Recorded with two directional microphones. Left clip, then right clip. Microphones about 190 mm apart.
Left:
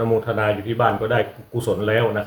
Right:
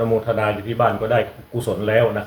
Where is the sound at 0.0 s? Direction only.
20° left (ahead or behind).